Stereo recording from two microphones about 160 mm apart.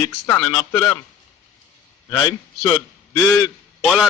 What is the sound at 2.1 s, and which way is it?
Speech, 25° left (ahead or behind).